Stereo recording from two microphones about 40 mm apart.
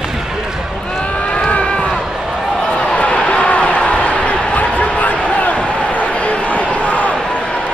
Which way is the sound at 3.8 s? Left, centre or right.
Left.